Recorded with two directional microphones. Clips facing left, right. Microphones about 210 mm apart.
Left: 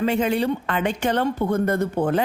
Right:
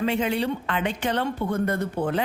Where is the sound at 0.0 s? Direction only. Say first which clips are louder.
Left 3 dB; 45° left (ahead or behind).